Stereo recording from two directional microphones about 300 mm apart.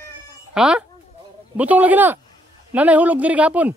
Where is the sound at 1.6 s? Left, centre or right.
Centre.